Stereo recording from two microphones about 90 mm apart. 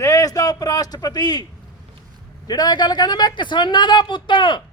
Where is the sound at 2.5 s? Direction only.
50° left (ahead or behind).